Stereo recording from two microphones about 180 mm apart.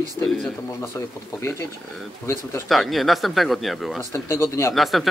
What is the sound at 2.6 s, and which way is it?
Speech, centre (ahead or behind).